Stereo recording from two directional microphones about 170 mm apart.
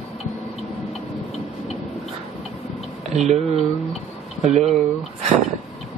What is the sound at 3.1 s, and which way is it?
Speech, 40° right (ahead or behind).